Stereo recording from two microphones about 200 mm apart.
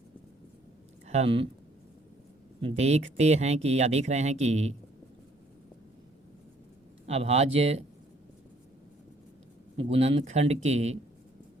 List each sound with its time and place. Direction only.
1.0 s speech: 35° right (ahead or behind)
2.6 s speech: 30° right (ahead or behind)
7.1 s speech: 30° right (ahead or behind)
9.7 s speech: 30° right (ahead or behind)